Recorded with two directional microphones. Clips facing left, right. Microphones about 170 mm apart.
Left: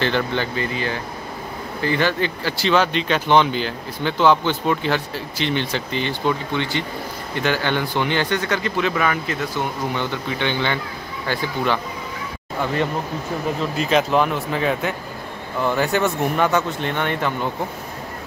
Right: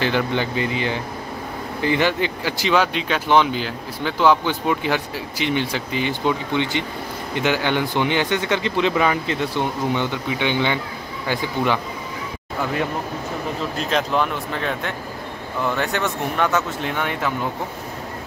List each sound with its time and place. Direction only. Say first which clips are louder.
0.0 s speech: even; 15° right (ahead or behind)
10.4 s speech: right 2 dB; 15° right (ahead or behind)
13.7 s speech: left 3 dB; 5° left (ahead or behind)